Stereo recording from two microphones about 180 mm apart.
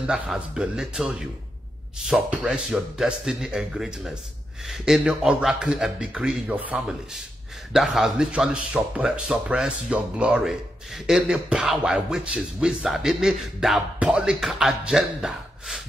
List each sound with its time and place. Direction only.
0.0 s speech: 5° right (ahead or behind)